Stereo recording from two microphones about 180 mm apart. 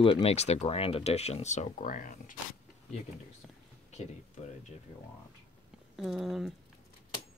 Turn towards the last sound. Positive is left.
turn(degrees=0)  # may be behind; listen again after turning